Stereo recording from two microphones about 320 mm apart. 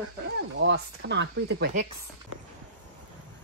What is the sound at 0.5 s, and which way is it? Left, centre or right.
Speech, right.